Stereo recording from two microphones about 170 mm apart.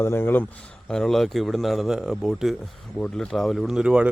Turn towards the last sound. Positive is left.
turn(degrees=-5)  # may be behind; listen again after turning